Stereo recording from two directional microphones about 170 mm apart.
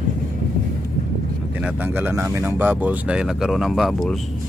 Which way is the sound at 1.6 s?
10° right (ahead or behind).